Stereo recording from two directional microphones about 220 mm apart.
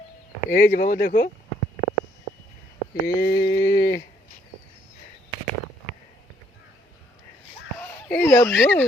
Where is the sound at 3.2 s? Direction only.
45° left (ahead or behind).